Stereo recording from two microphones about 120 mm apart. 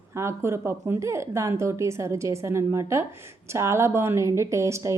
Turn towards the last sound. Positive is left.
turn(degrees=-25)  # may be behind; listen again after turning